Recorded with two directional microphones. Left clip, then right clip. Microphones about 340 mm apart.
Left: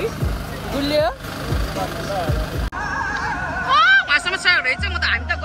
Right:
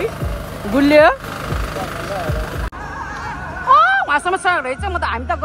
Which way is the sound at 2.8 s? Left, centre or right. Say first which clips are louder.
Left 8 dB; left.